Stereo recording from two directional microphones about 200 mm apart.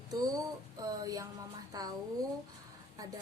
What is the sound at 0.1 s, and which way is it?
Mantra, 20° right (ahead or behind).